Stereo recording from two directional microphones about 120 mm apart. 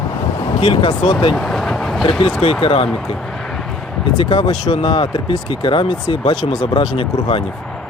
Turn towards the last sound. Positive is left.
turn(degrees=50)  # may be behind; listen again after turning